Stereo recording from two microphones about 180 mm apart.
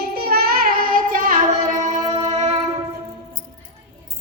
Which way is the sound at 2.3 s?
35° right (ahead or behind).